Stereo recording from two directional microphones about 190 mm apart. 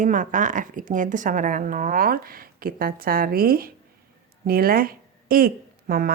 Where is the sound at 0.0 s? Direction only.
40° right (ahead or behind).